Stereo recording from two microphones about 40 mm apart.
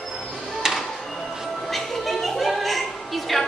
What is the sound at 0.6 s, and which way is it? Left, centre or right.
Music, centre.